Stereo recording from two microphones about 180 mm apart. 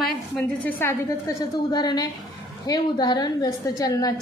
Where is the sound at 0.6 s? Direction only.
10° left (ahead or behind).